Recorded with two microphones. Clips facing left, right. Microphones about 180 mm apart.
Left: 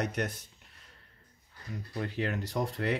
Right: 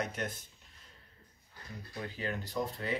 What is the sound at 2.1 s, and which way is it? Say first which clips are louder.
Speech: left 3 dB; 75° left (ahead or behind).